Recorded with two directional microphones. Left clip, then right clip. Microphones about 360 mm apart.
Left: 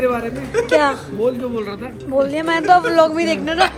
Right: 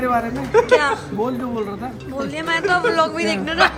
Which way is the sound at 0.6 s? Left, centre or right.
Centre.